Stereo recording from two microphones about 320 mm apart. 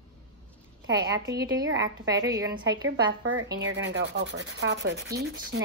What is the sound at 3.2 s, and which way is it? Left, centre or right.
Sanding, right.